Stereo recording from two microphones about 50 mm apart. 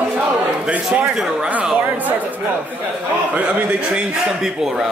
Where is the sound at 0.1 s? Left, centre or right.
Right.